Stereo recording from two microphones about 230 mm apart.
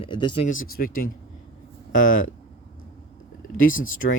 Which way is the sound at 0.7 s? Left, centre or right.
Left.